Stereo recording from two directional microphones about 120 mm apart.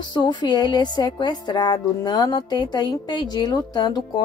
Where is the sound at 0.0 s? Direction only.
40° left (ahead or behind).